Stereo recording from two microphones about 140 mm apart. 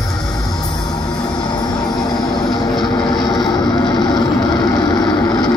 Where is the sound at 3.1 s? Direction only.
30° left (ahead or behind).